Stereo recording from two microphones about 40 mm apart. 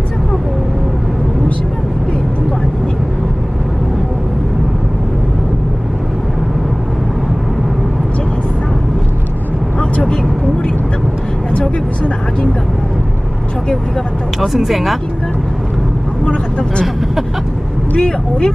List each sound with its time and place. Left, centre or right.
14.4 s speech: centre
16.3 s vehicle: left
17.9 s vehicle: left